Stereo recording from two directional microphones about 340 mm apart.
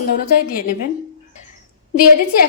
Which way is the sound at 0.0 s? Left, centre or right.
Left.